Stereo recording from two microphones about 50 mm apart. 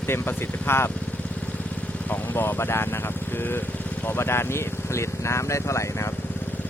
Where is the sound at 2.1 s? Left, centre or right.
Left.